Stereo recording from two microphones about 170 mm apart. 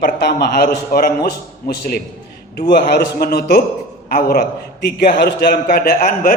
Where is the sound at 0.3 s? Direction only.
70° left (ahead or behind).